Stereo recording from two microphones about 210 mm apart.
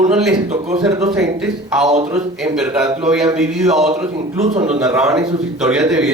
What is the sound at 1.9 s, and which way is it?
Speech, 35° right (ahead or behind).